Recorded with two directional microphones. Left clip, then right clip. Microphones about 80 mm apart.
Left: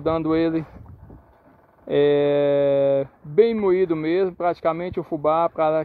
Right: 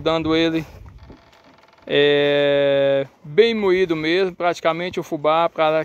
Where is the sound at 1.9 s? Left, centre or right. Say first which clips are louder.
Right 2 dB; centre.